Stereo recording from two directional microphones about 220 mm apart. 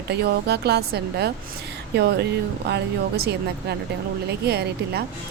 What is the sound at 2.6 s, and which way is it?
Speech, 50° right (ahead or behind).